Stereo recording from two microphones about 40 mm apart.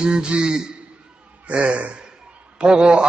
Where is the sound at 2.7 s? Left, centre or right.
Right.